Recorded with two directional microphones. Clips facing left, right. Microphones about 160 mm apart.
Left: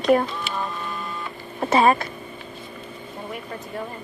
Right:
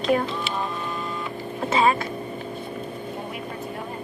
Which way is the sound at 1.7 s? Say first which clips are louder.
Left 3 dB; 50° left (ahead or behind).